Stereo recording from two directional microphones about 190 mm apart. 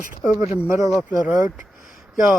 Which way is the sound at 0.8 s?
Centre (ahead or behind).